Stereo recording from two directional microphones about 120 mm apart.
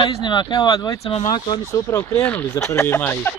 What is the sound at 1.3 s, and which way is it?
Speech, 35° left (ahead or behind).